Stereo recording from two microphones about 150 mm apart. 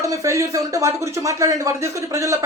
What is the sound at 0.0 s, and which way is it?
Speech, 20° right (ahead or behind).